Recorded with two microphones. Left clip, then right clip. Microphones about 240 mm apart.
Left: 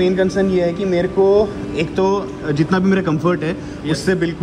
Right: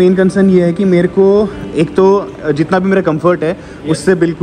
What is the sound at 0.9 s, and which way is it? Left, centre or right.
Speech, right.